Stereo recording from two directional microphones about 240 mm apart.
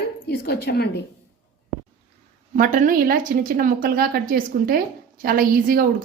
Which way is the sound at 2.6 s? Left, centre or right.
Right.